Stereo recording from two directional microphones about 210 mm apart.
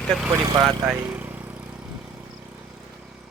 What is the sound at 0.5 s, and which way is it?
Speech, 20° right (ahead or behind).